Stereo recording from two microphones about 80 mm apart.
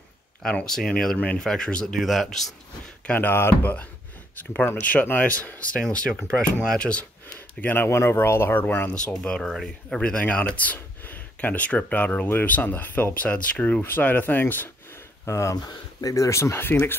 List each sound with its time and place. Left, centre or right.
0.4 s speech: centre
2.0 s speech: centre
3.1 s speech: left
7.3 s speech: left
9.2 s speech: centre; by 15.0 s left
15.2 s speech: left
15.5 s speech: left